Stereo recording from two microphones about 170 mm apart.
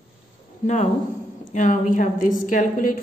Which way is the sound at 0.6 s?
40° left (ahead or behind).